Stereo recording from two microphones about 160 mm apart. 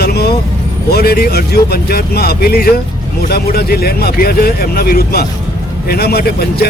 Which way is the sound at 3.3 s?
80° left.